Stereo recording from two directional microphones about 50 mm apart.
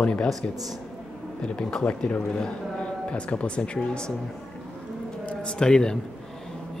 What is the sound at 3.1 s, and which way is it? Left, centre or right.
Speech, left.